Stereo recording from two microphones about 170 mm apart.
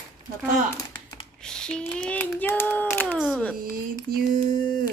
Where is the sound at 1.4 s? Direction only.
5° left (ahead or behind).